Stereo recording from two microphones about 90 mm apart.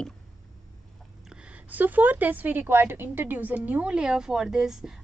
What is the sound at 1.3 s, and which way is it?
A woman's voice, 10° right (ahead or behind).